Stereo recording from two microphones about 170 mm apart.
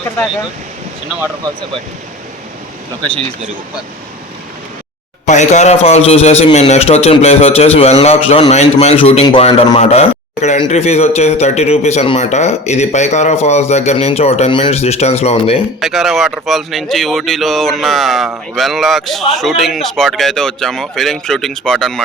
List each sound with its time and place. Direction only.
5.2 s a man's voice: 45° left (ahead or behind)
15.8 s speech: centre (ahead or behind)